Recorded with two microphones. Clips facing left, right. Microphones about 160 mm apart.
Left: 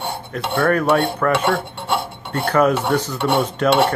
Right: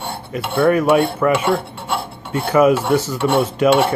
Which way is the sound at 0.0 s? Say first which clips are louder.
Even; 5° right (ahead or behind).